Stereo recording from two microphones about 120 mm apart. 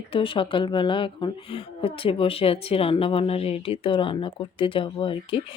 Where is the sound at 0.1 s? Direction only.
45° left (ahead or behind).